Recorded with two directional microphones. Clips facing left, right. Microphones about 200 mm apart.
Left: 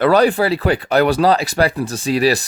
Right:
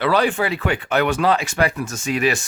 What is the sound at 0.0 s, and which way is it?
Speech, 40° left (ahead or behind).